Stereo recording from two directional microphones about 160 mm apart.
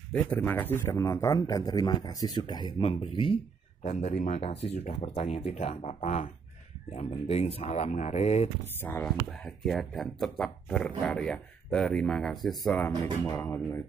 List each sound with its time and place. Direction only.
0.1 s a man's voice: 10° left (ahead or behind); by 3.3 s 35° left (ahead or behind)
3.8 s speech: 45° left (ahead or behind)
8.8 s speech: 10° left (ahead or behind)
9.3 s speech: centre (ahead or behind)
12.7 s speech: 15° left (ahead or behind)